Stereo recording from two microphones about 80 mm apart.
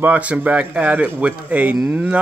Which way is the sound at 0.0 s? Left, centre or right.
Centre.